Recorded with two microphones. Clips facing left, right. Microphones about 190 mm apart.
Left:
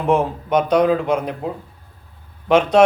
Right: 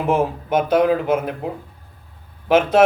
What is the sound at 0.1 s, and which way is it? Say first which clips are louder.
A man's voice: left 2 dB; 5° right (ahead or behind).